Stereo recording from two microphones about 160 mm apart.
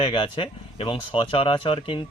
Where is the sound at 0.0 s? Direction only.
35° left (ahead or behind).